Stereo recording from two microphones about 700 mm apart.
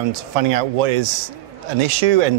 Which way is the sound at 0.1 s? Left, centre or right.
Right.